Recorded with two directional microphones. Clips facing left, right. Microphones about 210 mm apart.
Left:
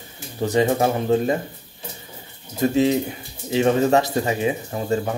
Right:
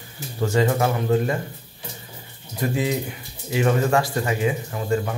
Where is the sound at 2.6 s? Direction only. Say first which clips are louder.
Left 6 dB; 25° left (ahead or behind).